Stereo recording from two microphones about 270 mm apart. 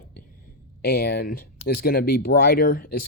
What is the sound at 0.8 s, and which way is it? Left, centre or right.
Speech, left.